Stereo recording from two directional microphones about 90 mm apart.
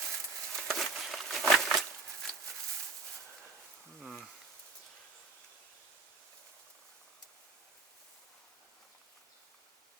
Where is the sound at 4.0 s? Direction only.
Centre (ahead or behind).